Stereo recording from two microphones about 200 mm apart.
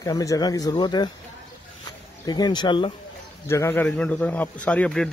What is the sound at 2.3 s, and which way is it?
A man's voice, 20° left (ahead or behind).